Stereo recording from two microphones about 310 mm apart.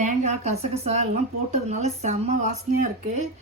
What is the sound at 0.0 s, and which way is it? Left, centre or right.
Speech, right.